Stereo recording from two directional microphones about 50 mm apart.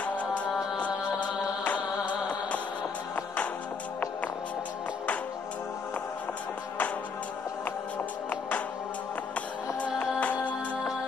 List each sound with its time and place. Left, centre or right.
0.0 s music: left
8.3 s music: left
10.2 s music: left